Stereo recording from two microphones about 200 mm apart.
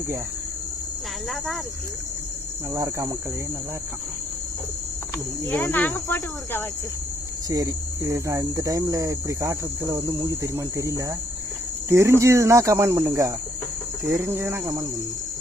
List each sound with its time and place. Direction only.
2.7 s speech: 15° right (ahead or behind)
5.5 s cricket: 10° left (ahead or behind)
7.5 s speech: 15° right (ahead or behind)